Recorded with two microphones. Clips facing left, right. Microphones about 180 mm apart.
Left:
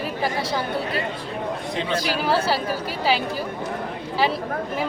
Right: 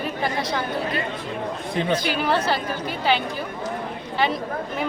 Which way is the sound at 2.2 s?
5° left (ahead or behind).